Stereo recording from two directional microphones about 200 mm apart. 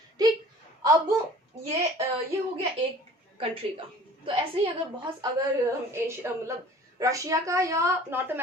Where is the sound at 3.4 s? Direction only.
25° right (ahead or behind).